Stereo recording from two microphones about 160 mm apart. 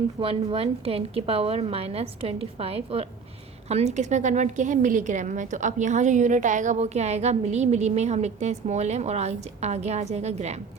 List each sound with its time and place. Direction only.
0.2 s a woman's voice: 35° right (ahead or behind)